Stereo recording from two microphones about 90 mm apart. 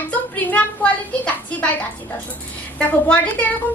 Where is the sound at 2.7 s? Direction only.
15° left (ahead or behind).